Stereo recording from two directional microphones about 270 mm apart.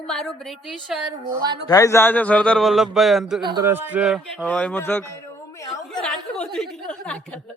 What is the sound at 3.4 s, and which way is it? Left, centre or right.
Speech, centre.